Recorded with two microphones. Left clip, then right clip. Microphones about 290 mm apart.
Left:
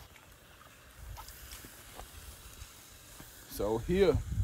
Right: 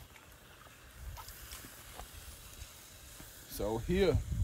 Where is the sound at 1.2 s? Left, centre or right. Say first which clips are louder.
Even; centre.